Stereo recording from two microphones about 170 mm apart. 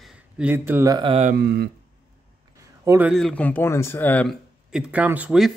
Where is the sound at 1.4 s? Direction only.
75° right (ahead or behind).